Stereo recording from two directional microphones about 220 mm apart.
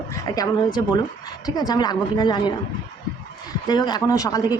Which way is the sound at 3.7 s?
20° left (ahead or behind).